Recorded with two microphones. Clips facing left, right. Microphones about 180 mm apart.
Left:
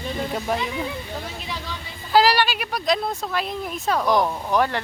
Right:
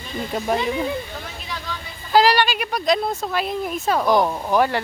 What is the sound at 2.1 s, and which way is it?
A woman's voice, 5° left (ahead or behind).